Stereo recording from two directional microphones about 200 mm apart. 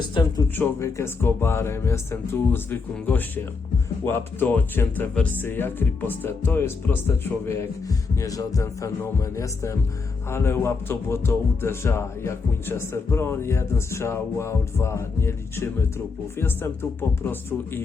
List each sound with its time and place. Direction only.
0.1 s speech: 20° left (ahead or behind)
0.5 s speech: 10° left (ahead or behind)